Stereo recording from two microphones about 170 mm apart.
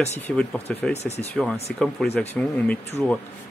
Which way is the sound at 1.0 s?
40° left (ahead or behind).